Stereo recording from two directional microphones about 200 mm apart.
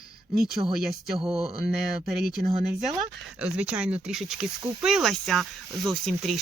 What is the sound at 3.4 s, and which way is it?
Speech, 5° right (ahead or behind).